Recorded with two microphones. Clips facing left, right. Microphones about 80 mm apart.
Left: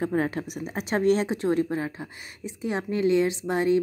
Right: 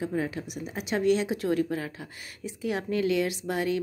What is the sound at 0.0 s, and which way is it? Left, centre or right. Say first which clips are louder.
A woman's voice: left 4 dB; left.